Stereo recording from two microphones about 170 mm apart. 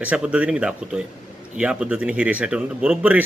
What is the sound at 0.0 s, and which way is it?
Speech, 5° right (ahead or behind).